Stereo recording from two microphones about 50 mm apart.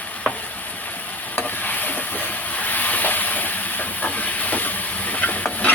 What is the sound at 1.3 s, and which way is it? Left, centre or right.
Stir, left.